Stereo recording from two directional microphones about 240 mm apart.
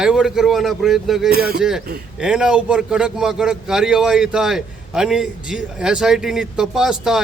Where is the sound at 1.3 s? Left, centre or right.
Right.